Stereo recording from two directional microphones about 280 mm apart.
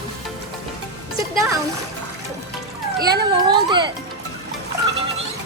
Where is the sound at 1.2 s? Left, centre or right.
Centre.